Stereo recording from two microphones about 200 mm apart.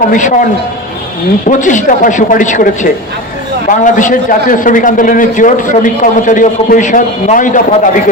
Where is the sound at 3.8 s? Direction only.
40° left (ahead or behind).